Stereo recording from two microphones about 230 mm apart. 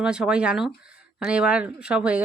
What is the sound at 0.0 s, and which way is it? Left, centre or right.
Speech, centre.